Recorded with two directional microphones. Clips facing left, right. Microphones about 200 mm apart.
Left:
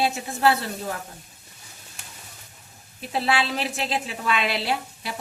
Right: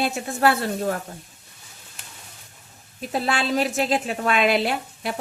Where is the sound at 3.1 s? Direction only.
45° right (ahead or behind).